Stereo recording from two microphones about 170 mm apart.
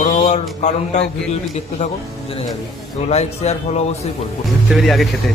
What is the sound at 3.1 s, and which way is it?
Music, 40° left (ahead or behind).